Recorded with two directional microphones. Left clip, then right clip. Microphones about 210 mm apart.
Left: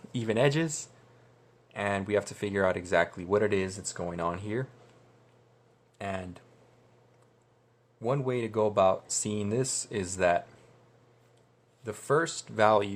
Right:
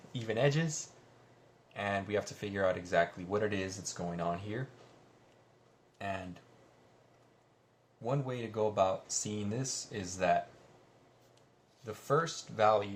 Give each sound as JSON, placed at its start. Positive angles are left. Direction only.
{"t": 0.1, "sound": "speech", "side_deg": 50}
{"t": 6.0, "sound": "speech", "side_deg": 55}
{"t": 8.0, "sound": "speech", "side_deg": 55}
{"t": 11.9, "sound": "speech", "side_deg": 55}